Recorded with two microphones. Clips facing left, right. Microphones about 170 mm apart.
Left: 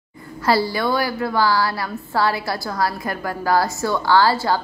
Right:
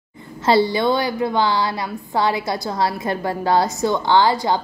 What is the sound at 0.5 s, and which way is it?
A woman's voice, 20° right (ahead or behind).